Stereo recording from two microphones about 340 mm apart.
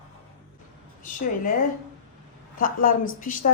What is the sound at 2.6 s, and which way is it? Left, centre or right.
Speech, left.